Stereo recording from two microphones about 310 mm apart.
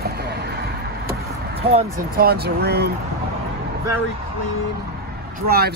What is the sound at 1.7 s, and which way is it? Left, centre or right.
Speech, right.